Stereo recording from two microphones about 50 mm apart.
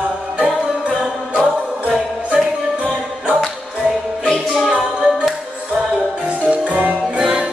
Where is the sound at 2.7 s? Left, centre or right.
Right.